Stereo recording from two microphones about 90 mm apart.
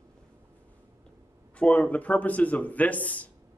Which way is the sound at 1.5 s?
15° left (ahead or behind).